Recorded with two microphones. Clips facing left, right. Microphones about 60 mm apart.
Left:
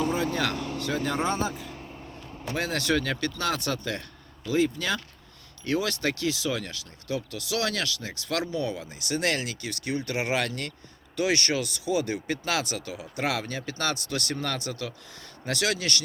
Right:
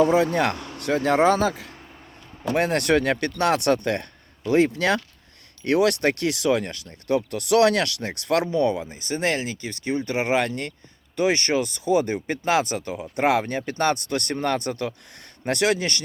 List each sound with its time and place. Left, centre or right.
0.3 s speech: right
1.1 s speech: right
2.5 s speech: right
8.3 s speech: right
8.8 s speech: right